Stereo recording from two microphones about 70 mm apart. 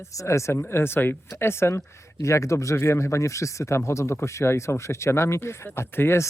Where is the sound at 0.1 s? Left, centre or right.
Left.